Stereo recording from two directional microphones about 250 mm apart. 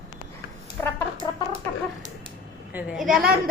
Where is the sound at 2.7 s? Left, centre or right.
Centre.